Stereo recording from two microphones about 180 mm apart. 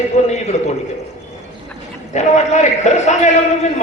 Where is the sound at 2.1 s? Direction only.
40° left (ahead or behind).